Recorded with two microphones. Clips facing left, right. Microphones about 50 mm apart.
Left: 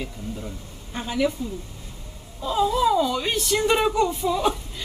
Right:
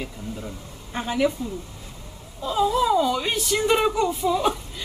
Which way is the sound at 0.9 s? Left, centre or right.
Right.